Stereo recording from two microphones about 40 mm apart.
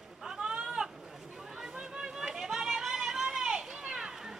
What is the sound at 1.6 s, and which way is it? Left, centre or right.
Chatter, centre.